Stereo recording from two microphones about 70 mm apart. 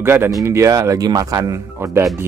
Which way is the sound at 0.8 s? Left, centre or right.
Right.